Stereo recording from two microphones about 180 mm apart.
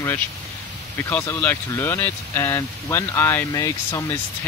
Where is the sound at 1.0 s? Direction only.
15° left (ahead or behind).